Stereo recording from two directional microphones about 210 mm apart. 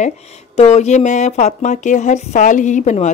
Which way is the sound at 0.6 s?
30° left (ahead or behind).